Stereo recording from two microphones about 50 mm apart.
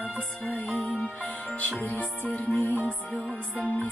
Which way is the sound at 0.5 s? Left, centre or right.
Left.